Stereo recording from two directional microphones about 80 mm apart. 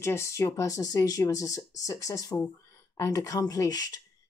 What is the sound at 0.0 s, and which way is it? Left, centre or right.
Speech, left.